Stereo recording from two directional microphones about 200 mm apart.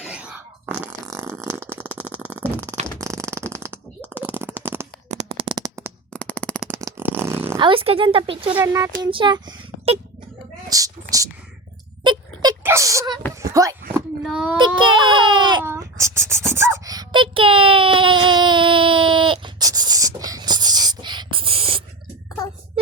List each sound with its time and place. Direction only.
0.0 s fart: 5° right (ahead or behind)
5.0 s shuffling cards: 30° right (ahead or behind)
6.1 s shuffling cards: 5° left (ahead or behind)
6.7 s fart: 15° right (ahead or behind)
7.6 s speech: 25° right (ahead or behind)
8.5 s speech: 15° right (ahead or behind)
10.7 s a sound: 15° right (ahead or behind)
14.3 s child singing: 5° right (ahead or behind)
14.8 s baby cry: 25° right (ahead or behind)
15.6 s a sound: 15° right (ahead or behind)